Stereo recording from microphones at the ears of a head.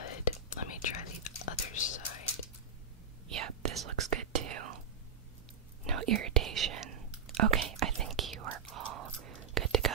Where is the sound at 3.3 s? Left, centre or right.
Right.